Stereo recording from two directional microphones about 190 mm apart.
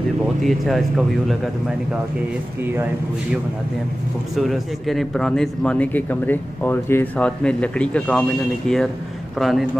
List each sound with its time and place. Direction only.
0.4 s a man's voice: centre (ahead or behind)
4.4 s a man's voice: centre (ahead or behind)